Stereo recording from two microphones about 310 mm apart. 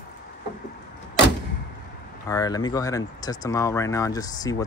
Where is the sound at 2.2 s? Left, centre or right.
Centre.